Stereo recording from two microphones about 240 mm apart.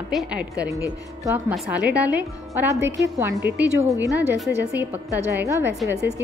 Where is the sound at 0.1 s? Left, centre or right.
Centre.